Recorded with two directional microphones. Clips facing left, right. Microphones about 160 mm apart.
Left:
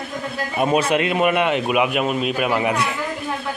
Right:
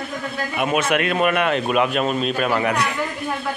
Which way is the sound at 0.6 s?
30° left (ahead or behind).